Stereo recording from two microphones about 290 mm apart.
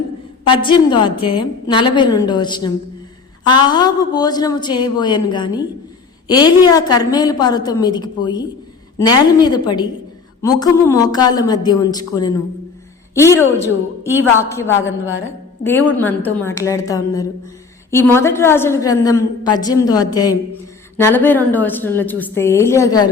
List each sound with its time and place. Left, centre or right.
0.4 s a woman's voice: centre